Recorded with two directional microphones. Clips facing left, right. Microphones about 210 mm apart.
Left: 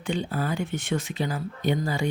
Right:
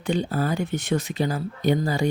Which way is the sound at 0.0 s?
40° right (ahead or behind).